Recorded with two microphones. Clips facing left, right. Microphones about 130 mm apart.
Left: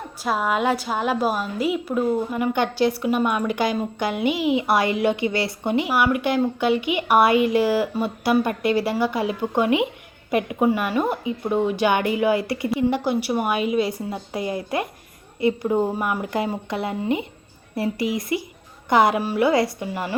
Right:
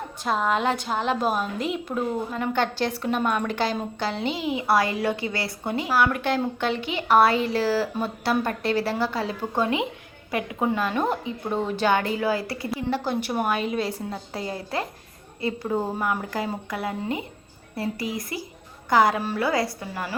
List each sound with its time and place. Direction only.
0.2 s a woman's voice: 5° left (ahead or behind)
13.1 s a woman's voice: 10° left (ahead or behind)